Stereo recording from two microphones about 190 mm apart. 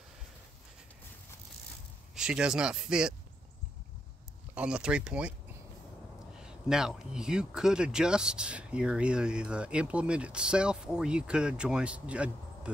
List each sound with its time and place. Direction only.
2.1 s speech: 5° right (ahead or behind)
4.6 s speech: 5° right (ahead or behind)
6.3 s speech: 5° right (ahead or behind)